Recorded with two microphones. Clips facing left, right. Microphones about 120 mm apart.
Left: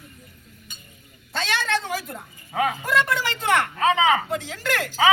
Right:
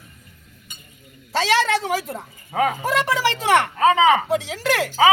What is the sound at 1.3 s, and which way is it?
Speech, 90° right.